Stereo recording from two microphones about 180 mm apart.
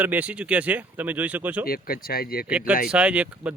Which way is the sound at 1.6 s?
55° left (ahead or behind).